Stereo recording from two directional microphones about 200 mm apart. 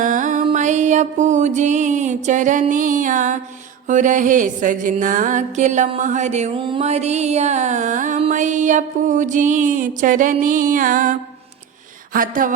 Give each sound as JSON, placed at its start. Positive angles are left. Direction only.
{"t": 0.0, "sound": "music", "side_deg": -40}